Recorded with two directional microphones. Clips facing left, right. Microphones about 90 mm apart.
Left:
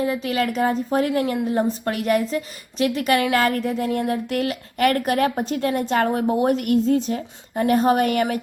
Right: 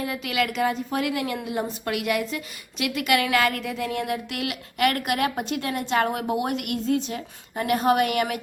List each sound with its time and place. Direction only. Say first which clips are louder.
0.0 s a woman's voice: left 4 dB; 30° left (ahead or behind)